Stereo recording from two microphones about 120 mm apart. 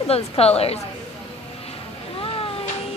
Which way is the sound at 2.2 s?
50° left (ahead or behind).